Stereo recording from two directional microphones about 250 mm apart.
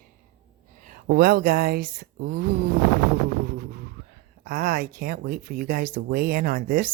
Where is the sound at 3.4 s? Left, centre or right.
Right.